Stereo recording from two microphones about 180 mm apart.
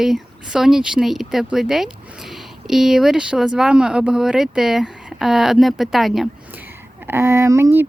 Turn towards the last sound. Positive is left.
turn(degrees=-15)  # may be behind; listen again after turning